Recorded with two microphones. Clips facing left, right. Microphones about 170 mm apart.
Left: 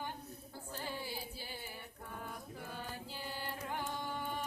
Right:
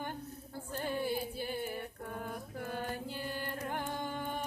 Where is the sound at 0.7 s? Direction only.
55° right (ahead or behind).